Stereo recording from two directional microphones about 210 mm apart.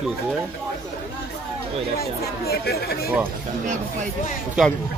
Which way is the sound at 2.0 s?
45° left (ahead or behind).